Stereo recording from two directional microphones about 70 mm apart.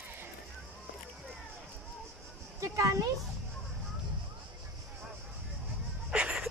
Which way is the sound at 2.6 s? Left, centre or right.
Right.